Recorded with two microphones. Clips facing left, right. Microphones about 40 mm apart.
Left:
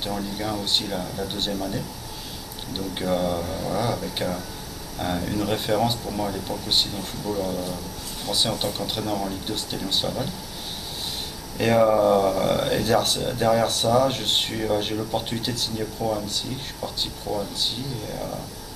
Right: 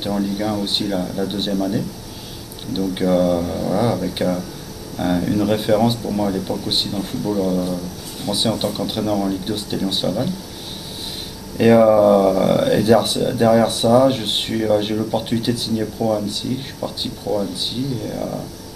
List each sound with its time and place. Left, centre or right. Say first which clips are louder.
0.0 s speech: right 7 dB; centre
11.5 s speech: right 7 dB; centre